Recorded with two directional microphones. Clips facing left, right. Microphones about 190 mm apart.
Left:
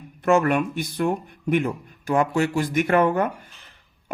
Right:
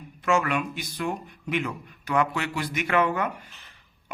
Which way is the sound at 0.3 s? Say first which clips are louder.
Left 6 dB; 55° left (ahead or behind).